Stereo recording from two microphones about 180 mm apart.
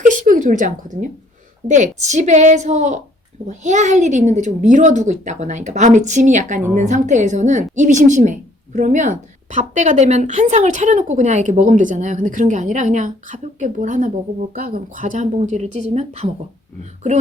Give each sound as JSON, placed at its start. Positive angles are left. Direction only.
{"t": 0.0, "sound": "a woman's voice", "side_deg": -45}